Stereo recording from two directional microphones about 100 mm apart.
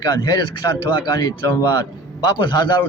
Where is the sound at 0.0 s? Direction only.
40° left (ahead or behind).